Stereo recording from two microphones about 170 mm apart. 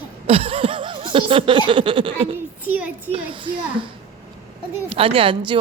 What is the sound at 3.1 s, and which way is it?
Speech, 30° right (ahead or behind).